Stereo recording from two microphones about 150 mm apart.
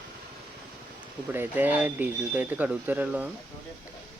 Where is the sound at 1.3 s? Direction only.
10° right (ahead or behind).